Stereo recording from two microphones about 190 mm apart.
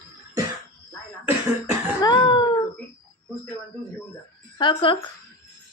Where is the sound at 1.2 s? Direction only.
10° right (ahead or behind).